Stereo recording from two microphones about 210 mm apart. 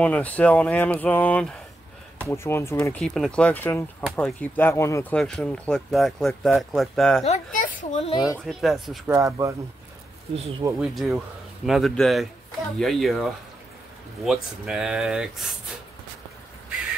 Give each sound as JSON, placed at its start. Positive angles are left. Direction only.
{"t": 0.0, "sound": "speech", "side_deg": 5}
{"t": 7.2, "sound": "a child's voice", "side_deg": 35}
{"t": 8.5, "sound": "speech", "side_deg": 0}
{"t": 9.1, "sound": "speech", "side_deg": -15}
{"t": 10.8, "sound": "speech", "side_deg": 0}